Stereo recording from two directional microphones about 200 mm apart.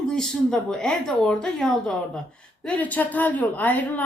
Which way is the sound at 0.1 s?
5° left (ahead or behind).